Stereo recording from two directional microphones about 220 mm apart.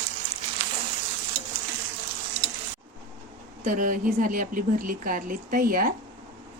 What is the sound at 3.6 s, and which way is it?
A woman's voice, 35° right (ahead or behind).